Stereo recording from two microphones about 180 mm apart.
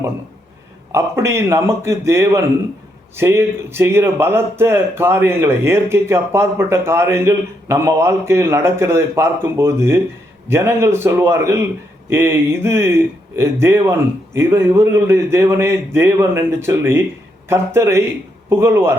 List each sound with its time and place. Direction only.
0.9 s speech: 15° right (ahead or behind)